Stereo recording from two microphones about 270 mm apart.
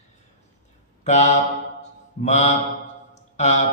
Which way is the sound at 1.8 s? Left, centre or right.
Left.